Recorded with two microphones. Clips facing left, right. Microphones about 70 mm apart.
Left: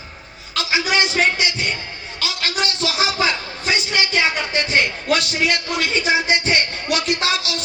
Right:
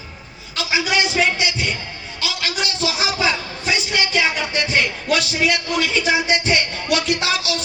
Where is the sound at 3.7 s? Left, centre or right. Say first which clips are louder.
Even; left.